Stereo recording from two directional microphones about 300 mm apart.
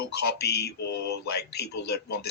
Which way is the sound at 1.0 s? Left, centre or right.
Left.